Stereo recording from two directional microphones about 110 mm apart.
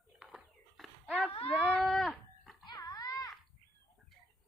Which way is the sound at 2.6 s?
35° left (ahead or behind).